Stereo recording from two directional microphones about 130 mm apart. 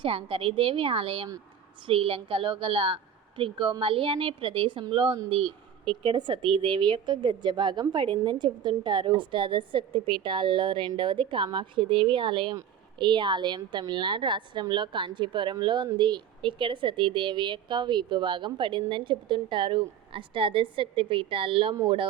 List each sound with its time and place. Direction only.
0.0 s a woman's voice: 45° right (ahead or behind)